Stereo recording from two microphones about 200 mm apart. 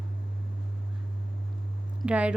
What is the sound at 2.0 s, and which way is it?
Speech, 5° right (ahead or behind).